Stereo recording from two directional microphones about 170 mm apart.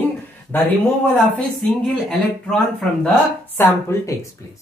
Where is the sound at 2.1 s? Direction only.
Centre (ahead or behind).